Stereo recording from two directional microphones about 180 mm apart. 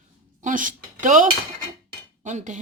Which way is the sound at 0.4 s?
45° right (ahead or behind).